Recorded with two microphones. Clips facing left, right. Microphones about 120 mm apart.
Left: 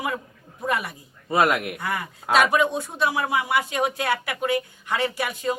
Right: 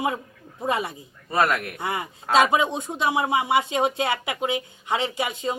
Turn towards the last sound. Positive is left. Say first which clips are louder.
# even
turn(degrees=-20)  # may be behind; listen again after turning